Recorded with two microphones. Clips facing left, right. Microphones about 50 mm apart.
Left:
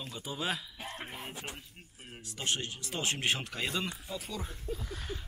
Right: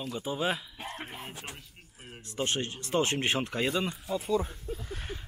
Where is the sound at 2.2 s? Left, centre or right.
Right.